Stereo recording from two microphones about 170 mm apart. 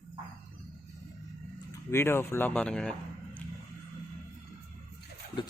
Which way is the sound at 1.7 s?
15° left (ahead or behind).